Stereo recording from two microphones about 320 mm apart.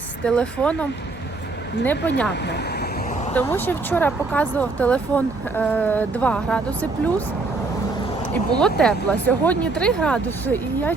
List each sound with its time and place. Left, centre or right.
0.3 s speech: centre
3.3 s speech: centre
8.3 s speech: centre